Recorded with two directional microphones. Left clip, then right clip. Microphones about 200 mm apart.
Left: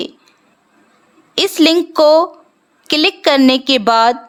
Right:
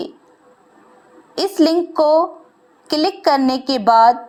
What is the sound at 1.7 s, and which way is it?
Speech, 30° left (ahead or behind).